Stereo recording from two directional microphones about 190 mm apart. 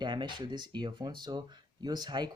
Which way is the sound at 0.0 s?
25° right (ahead or behind).